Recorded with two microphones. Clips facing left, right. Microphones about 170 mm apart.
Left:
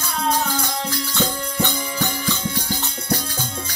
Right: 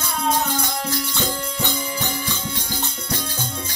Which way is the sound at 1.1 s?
15° right (ahead or behind).